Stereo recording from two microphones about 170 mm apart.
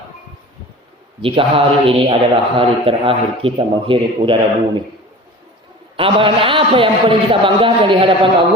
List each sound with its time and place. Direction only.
1.2 s a man's voice: 30° right (ahead or behind)
6.0 s a man's voice: 30° right (ahead or behind)